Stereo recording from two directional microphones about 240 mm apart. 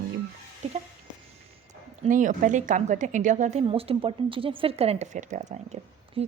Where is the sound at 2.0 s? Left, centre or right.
Right.